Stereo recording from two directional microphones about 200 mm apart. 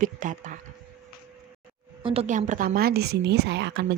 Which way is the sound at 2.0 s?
35° right (ahead or behind).